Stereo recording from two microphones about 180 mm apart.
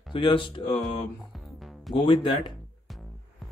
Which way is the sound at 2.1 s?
30° left (ahead or behind).